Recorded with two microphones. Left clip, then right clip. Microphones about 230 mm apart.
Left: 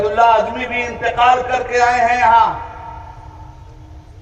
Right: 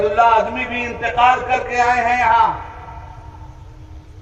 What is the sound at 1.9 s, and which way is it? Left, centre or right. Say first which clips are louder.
Speech: left 2 dB; left.